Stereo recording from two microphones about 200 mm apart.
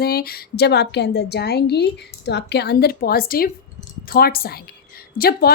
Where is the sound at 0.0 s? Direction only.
50° left (ahead or behind).